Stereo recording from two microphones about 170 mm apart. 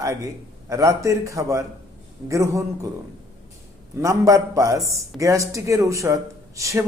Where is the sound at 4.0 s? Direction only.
20° right (ahead or behind).